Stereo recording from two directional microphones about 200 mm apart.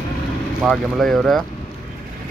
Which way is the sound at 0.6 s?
Centre (ahead or behind).